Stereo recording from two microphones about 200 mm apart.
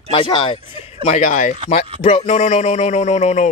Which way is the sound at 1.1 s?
40° left (ahead or behind).